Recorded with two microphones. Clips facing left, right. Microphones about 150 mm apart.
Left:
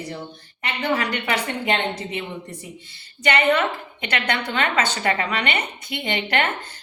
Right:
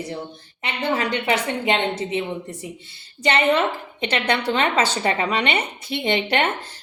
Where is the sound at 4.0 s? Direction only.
25° right (ahead or behind).